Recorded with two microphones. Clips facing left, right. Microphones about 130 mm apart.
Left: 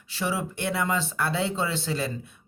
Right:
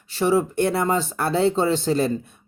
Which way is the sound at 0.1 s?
45° right (ahead or behind).